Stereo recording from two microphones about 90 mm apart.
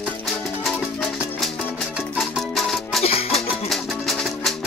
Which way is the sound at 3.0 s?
90° left.